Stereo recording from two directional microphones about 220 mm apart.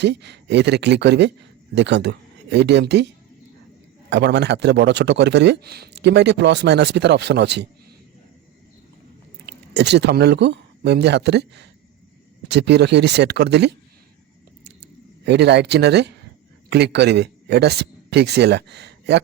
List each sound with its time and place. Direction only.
0.0 s speech: 50° right (ahead or behind)
4.1 s speech: 50° right (ahead or behind)
9.5 s speech: 50° right (ahead or behind)
15.2 s speech: 50° right (ahead or behind)